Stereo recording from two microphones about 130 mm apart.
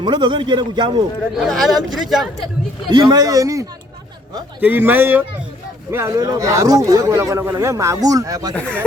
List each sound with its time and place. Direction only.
0.0 s a man's voice: 35° right (ahead or behind)
1.4 s a man's voice: centre (ahead or behind)
2.9 s speech: 30° right (ahead or behind)
4.6 s speech: 15° right (ahead or behind)